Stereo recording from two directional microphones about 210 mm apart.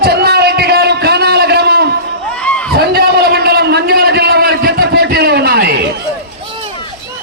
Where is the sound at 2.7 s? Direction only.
50° right (ahead or behind).